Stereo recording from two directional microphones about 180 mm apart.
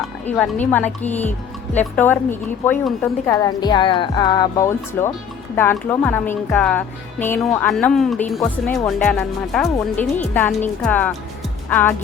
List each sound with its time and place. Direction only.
0.3 s a woman's voice: 5° left (ahead or behind)